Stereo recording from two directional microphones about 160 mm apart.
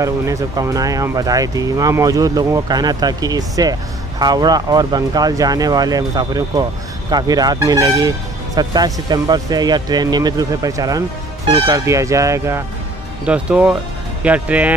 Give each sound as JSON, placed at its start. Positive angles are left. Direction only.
{"t": 0.0, "sound": "speech", "side_deg": -20}
{"t": 13.2, "sound": "speech", "side_deg": -5}